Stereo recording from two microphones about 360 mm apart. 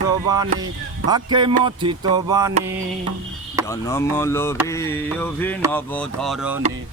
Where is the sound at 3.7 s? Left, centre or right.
Centre.